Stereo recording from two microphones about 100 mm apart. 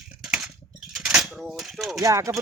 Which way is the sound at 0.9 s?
5° right (ahead or behind).